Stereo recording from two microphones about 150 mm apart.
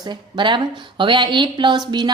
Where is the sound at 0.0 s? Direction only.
30° right (ahead or behind).